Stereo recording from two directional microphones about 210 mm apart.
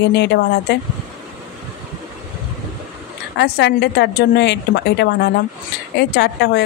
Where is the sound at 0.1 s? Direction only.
55° left (ahead or behind).